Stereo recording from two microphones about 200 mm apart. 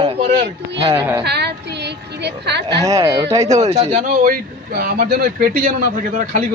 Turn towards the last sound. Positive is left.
turn(degrees=-45)  # may be behind; listen again after turning